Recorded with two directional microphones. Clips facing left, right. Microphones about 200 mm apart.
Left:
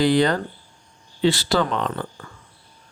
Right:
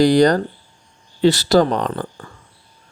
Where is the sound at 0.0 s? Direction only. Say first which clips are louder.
Right 5 dB; 40° right (ahead or behind).